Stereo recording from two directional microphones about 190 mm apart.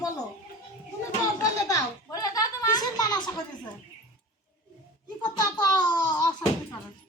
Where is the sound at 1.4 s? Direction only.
15° left (ahead or behind).